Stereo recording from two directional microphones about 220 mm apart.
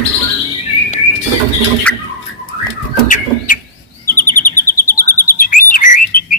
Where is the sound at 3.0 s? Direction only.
35° left (ahead or behind).